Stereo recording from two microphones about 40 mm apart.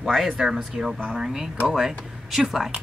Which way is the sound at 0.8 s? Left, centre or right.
Right.